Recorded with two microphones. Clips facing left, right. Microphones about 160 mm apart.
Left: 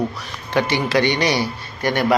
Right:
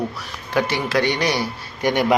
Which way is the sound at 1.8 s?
15° right (ahead or behind).